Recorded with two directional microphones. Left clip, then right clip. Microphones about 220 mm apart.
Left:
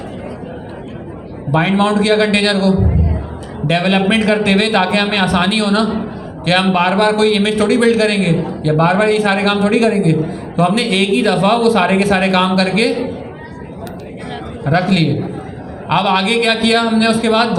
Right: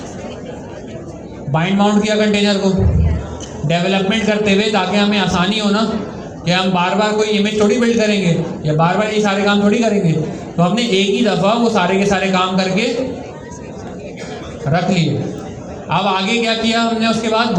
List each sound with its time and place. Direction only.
1.5 s a man's voice: 45° left (ahead or behind)
3.7 s a man's voice: 50° left (ahead or behind)
14.7 s a man's voice: 50° left (ahead or behind)